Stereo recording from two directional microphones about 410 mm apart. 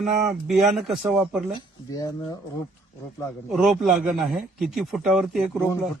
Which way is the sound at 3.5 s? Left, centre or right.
Centre.